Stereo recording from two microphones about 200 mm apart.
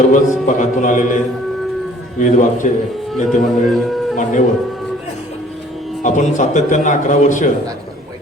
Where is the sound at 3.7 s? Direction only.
Centre (ahead or behind).